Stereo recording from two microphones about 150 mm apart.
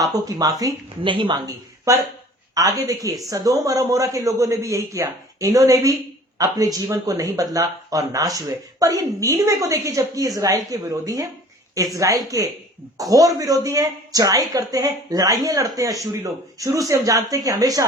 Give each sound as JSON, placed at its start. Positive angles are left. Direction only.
{"t": 0.0, "sound": "a woman's voice", "side_deg": -25}
{"t": 1.0, "sound": "a woman's voice", "side_deg": -35}